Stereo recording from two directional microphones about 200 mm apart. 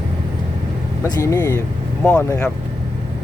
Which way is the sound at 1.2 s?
15° left (ahead or behind).